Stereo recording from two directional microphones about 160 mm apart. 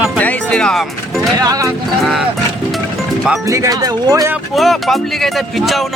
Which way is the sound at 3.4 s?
20° right (ahead or behind).